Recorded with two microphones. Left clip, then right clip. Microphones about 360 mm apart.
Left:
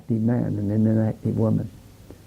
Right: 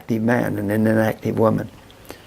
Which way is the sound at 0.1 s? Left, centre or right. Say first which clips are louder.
Right 6 dB; centre.